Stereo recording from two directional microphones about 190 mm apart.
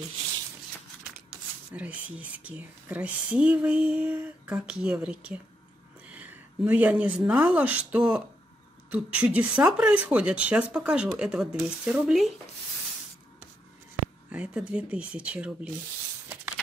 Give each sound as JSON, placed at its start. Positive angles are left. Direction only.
{"t": 1.7, "sound": "speech", "side_deg": -10}
{"t": 14.3, "sound": "speech", "side_deg": -5}